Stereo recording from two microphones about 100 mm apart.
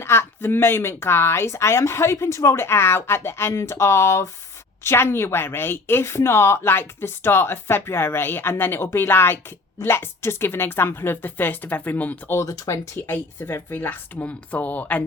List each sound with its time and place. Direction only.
0.0 s speech: 25° left (ahead or behind)
12.4 s speech: 30° left (ahead or behind)
13.1 s speech: 20° left (ahead or behind)